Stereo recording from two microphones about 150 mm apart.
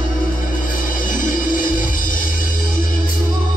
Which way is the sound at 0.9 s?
65° left (ahead or behind).